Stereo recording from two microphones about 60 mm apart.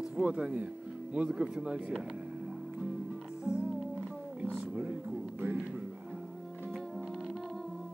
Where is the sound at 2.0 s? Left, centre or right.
Centre.